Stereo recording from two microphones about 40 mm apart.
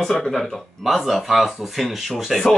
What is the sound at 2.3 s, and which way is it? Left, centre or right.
Speech, centre.